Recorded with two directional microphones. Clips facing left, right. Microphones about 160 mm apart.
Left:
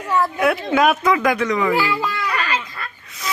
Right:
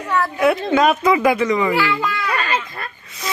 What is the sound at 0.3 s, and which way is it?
Speech, centre (ahead or behind).